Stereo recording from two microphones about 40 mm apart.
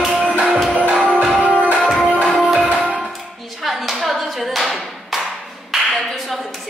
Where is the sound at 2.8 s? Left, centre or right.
Right.